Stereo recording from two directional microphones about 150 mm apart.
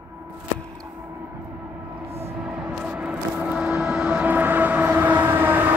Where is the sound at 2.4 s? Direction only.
5° right (ahead or behind).